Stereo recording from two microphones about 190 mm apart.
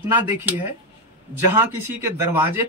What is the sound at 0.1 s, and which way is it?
Speech, 10° right (ahead or behind).